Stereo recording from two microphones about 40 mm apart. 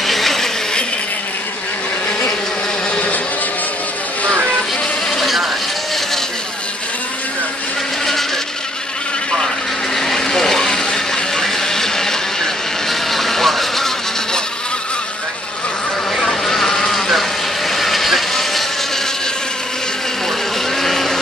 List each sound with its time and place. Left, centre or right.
0.0 s a sound: centre
2.9 s a sound: left
5.1 s vehicle: centre
9.9 s vehicle: centre
16.2 s vehicle: centre
20.8 s vehicle: centre